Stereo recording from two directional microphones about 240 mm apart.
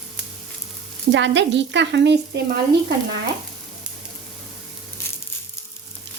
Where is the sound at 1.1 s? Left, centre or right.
Right.